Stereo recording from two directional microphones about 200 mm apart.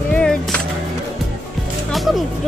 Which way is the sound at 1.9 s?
Centre (ahead or behind).